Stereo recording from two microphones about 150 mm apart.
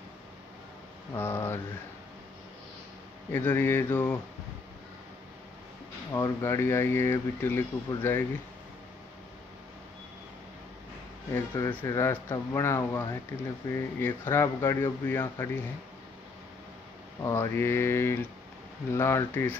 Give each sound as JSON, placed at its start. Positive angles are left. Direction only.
{"t": 1.1, "sound": "speech", "side_deg": 15}
{"t": 3.3, "sound": "speech", "side_deg": 15}
{"t": 6.1, "sound": "speech", "side_deg": 20}
{"t": 11.3, "sound": "speech", "side_deg": 20}
{"t": 17.2, "sound": "speech", "side_deg": 20}